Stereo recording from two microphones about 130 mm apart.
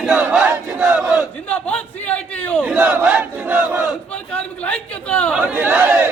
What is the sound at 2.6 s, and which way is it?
Battle cry, 10° right (ahead or behind).